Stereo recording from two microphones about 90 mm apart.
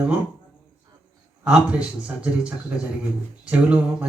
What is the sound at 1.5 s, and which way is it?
Speech, 10° right (ahead or behind).